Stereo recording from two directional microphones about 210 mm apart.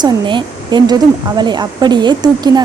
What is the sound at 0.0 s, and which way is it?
Speech, 20° right (ahead or behind).